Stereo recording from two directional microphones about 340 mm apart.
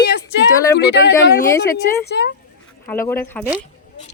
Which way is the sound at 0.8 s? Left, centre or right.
Left.